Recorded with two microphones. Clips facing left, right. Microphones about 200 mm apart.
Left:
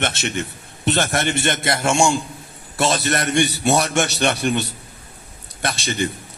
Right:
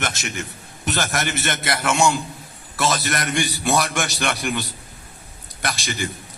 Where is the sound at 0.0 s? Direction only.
30° left (ahead or behind).